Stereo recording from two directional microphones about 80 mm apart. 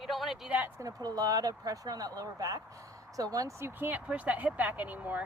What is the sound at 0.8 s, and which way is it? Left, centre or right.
Speech, right.